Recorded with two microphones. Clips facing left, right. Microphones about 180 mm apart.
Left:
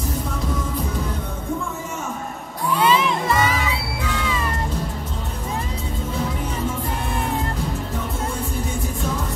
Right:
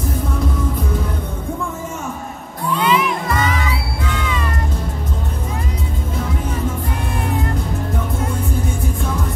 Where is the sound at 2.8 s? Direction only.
30° left (ahead or behind).